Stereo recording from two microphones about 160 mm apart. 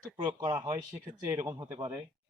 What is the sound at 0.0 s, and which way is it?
Speech, 25° right (ahead or behind).